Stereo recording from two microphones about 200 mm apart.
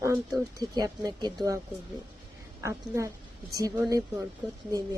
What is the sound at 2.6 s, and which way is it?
Speech, 15° right (ahead or behind).